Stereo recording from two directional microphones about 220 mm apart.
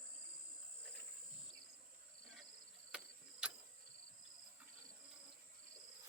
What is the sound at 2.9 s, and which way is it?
Clock, 5° right (ahead or behind).